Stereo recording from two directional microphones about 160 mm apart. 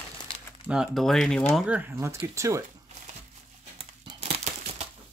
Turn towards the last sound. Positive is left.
turn(degrees=-40)  # may be behind; listen again after turning